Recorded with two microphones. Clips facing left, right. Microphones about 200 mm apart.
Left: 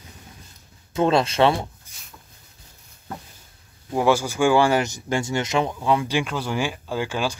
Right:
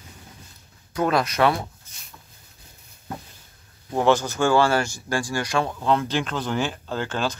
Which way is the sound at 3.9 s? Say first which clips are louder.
Even; 10° left (ahead or behind).